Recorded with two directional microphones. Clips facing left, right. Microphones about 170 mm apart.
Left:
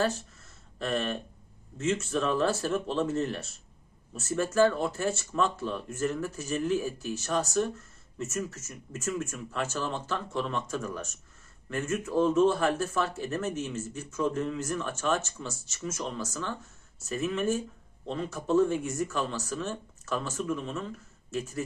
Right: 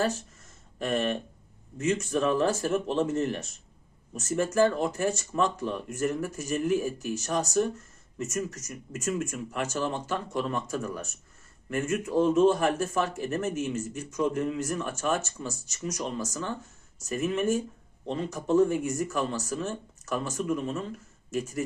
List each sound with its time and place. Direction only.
0.0 s speech: 10° right (ahead or behind)
8.2 s speech: 15° right (ahead or behind)